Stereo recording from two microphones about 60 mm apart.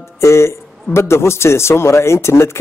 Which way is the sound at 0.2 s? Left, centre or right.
Left.